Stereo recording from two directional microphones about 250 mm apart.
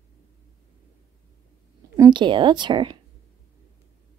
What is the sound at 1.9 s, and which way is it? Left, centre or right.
Speech, centre.